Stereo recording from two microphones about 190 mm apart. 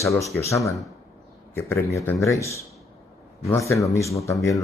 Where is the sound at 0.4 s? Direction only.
15° left (ahead or behind).